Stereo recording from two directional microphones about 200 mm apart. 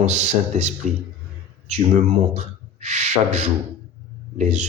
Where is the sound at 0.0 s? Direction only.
35° right (ahead or behind).